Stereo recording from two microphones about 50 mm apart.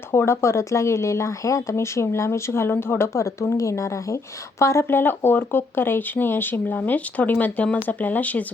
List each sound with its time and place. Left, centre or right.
0.1 s speech: left
3.2 s speech: left
4.9 s speech: left